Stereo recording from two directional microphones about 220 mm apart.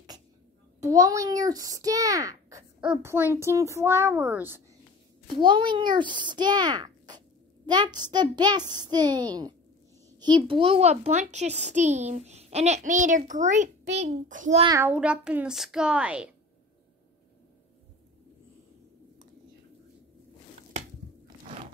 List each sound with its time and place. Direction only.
0.7 s a child's voice: 15° right (ahead or behind)
5.2 s a child's voice: 20° right (ahead or behind)
14.7 s a child's voice: 10° right (ahead or behind)